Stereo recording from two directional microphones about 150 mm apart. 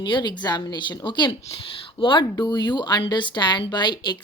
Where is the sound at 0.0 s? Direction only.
30° left (ahead or behind).